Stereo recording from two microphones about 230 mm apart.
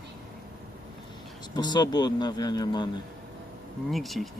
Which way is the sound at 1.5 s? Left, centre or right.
Centre.